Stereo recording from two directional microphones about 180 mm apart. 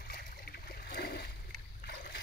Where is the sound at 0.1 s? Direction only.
60° left (ahead or behind).